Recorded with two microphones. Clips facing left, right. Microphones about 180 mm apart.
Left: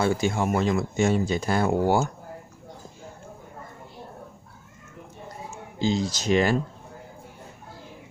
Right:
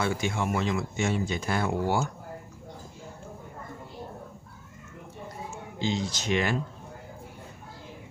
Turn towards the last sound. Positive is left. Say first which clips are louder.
# left 5 dB
turn(degrees=35)  # may be behind; listen again after turning